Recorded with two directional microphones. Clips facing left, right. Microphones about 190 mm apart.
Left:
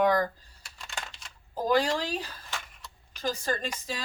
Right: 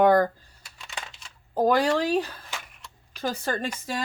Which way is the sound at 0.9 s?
5° right (ahead or behind).